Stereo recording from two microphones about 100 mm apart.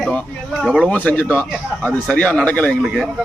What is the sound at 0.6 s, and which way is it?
Speech, 5° right (ahead or behind).